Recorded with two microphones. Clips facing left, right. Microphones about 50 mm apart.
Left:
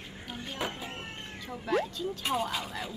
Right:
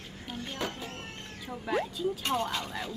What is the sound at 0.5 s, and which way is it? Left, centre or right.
Music, centre.